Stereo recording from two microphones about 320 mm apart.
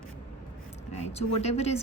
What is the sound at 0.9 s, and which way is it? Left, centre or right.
Speech, centre.